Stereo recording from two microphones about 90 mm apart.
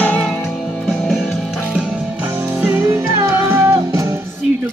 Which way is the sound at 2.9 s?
30° right (ahead or behind).